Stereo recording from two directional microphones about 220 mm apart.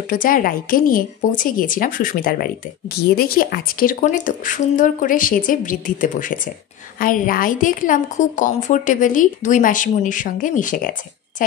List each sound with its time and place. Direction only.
0.1 s a woman's voice: 40° left (ahead or behind)